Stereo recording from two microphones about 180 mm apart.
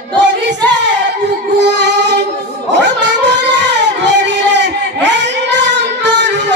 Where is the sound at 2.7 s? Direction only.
75° right (ahead or behind).